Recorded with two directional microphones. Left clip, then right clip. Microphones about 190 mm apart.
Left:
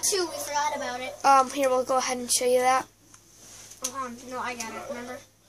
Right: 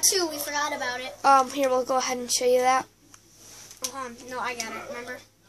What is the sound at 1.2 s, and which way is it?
Speech, 5° right (ahead or behind).